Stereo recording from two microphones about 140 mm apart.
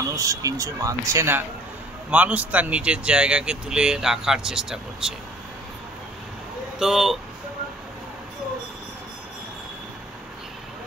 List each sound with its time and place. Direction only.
0.1 s speech: 25° right (ahead or behind); by 5.1 s 5° right (ahead or behind)
6.8 s speech: 5° right (ahead or behind)